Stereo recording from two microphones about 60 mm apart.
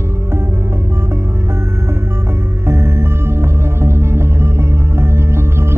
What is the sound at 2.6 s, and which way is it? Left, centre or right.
Music, right.